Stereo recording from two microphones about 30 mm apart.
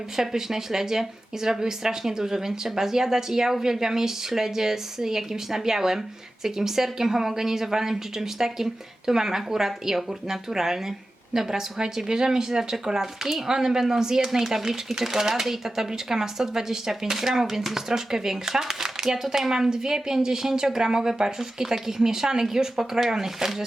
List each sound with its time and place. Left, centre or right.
0.2 s speech: centre